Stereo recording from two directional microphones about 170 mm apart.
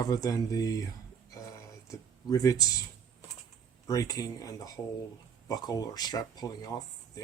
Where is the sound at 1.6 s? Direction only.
20° left (ahead or behind).